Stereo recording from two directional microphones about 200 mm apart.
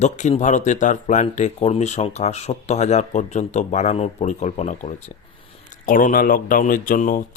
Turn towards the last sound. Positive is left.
turn(degrees=45)  # may be behind; listen again after turning